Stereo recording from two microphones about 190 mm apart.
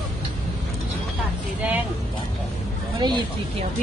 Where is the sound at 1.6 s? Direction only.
10° right (ahead or behind).